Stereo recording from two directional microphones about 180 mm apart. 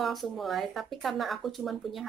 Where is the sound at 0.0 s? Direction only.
Centre (ahead or behind).